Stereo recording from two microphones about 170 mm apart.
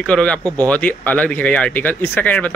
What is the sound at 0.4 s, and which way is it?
Speech, 20° right (ahead or behind).